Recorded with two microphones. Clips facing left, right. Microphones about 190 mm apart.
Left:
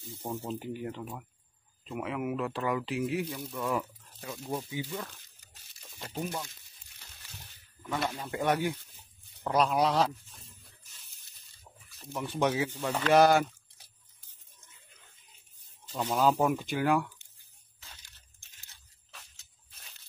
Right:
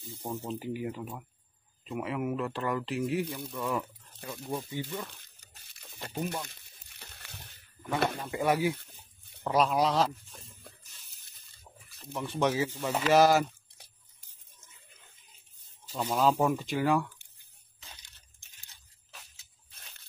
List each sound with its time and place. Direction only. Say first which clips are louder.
0.5 s speech: right 1 dB; centre (ahead or behind)
5.8 s a sound: right 1 dB; 5° right (ahead or behind)
6.2 s speech: right 1 dB; 5° left (ahead or behind)
6.5 s crumpling: right 3 dB; 60° right (ahead or behind)
8.0 s speech: right 5 dB; 55° right (ahead or behind)
8.3 s speech: even; 5° right (ahead or behind)
12.0 s speech: even; centre (ahead or behind)
15.8 s speech: even; 10° right (ahead or behind)
17.7 s a sound: right 2 dB; 15° right (ahead or behind)
19.1 s a sound: right 1 dB; centre (ahead or behind)